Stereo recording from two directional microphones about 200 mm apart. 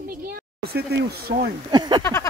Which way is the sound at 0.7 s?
50° right (ahead or behind).